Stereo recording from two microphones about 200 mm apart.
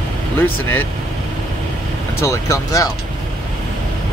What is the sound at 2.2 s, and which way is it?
Speech, 15° left (ahead or behind).